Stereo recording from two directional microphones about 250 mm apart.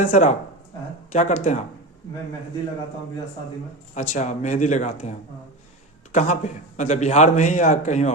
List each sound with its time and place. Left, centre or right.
0.0 s a man's voice: left
4.1 s a man's voice: left
6.1 s a man's voice: left